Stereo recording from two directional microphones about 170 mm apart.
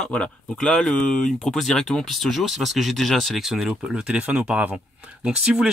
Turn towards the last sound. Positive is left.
turn(degrees=-5)  # may be behind; listen again after turning